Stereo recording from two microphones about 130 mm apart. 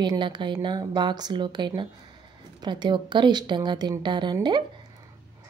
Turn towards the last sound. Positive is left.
turn(degrees=-35)  # may be behind; listen again after turning